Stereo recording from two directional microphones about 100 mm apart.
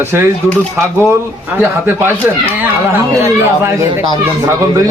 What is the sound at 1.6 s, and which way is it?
Speech, 20° right (ahead or behind).